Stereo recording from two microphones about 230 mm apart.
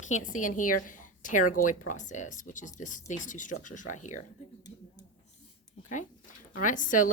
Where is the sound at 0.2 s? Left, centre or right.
Left.